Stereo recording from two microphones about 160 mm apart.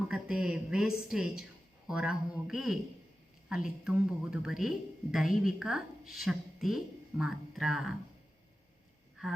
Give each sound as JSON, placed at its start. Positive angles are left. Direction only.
{"t": 0.1, "sound": "a woman's voice", "side_deg": -5}